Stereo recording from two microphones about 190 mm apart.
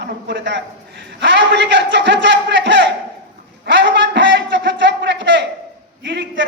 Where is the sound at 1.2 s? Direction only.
70° right (ahead or behind).